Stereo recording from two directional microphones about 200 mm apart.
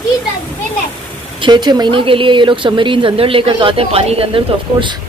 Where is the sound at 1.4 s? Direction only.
20° right (ahead or behind).